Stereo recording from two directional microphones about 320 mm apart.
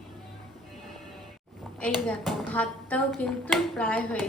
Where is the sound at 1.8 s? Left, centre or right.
Centre.